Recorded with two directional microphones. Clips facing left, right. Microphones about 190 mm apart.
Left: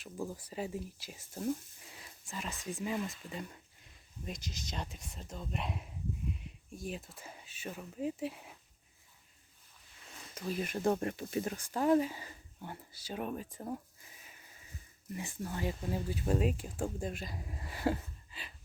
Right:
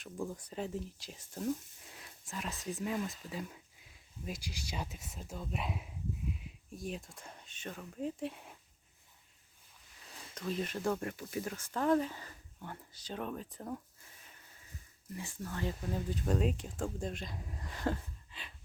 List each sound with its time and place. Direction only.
0.0 s speech: 5° left (ahead or behind)
10.3 s speech: 10° left (ahead or behind); by 11.7 s 25° left (ahead or behind)
11.7 s speech: 10° left (ahead or behind)